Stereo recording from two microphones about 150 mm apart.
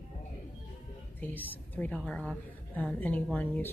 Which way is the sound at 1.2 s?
10° left (ahead or behind).